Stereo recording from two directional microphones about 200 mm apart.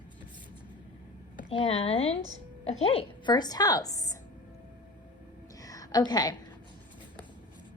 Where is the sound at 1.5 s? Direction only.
30° left (ahead or behind).